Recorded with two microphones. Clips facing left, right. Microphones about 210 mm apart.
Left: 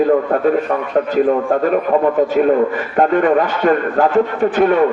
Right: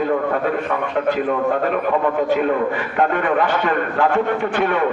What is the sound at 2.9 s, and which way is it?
Speech, 40° left (ahead or behind).